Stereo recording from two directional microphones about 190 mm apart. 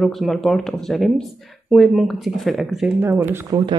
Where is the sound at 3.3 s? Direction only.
20° right (ahead or behind).